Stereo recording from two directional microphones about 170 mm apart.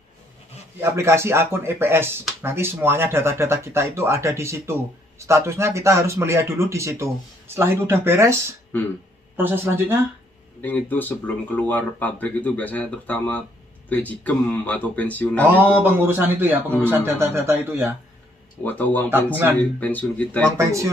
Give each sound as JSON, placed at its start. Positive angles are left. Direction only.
{"t": 0.7, "sound": "speech", "side_deg": -15}
{"t": 10.6, "sound": "speech", "side_deg": 10}
{"t": 15.4, "sound": "speech", "side_deg": -10}
{"t": 18.6, "sound": "speech", "side_deg": 10}
{"t": 20.5, "sound": "speech", "side_deg": -20}